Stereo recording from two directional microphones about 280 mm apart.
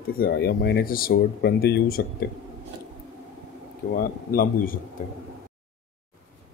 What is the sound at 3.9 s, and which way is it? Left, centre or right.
Speech, left.